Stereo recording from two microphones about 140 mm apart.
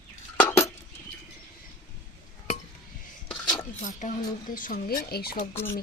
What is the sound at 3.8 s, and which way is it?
Speech, 65° left (ahead or behind).